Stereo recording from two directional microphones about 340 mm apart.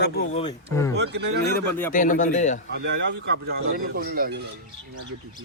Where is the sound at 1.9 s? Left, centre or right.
Left.